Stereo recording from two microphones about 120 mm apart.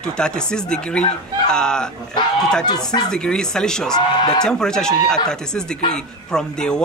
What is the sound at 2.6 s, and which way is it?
Speech, 35° left (ahead or behind).